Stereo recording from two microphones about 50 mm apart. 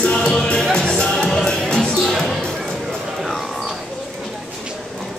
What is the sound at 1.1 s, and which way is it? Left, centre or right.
Music, centre.